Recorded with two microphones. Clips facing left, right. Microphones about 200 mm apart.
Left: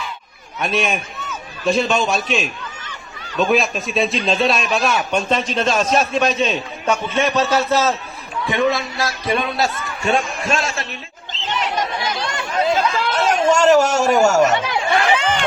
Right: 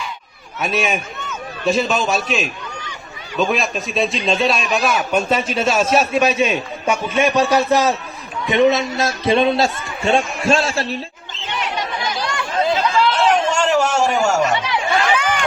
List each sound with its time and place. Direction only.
0.6 s a man's voice: centre (ahead or behind); by 10.9 s 30° right (ahead or behind)
11.3 s chatter: 50° right (ahead or behind)
12.2 s chatter: 25° left (ahead or behind)
12.7 s a sound: 45° left (ahead or behind)
14.8 s chatter: 30° left (ahead or behind)